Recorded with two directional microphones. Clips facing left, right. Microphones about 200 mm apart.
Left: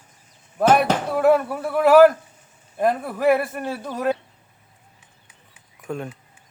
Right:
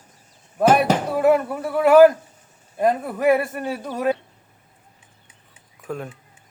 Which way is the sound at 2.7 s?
5° right (ahead or behind).